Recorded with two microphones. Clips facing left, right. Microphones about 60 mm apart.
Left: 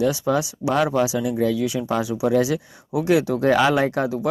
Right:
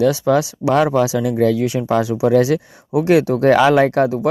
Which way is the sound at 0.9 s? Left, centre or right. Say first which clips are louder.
Right 4 dB; right.